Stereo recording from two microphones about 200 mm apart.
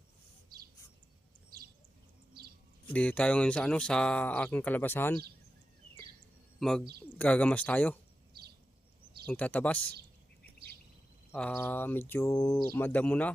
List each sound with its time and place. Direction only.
2.8 s speech: 5° left (ahead or behind)
6.6 s speech: 5° left (ahead or behind)
8.3 s a sound: 50° right (ahead or behind)
9.3 s speech: 5° left (ahead or behind)
11.3 s speech: 10° left (ahead or behind)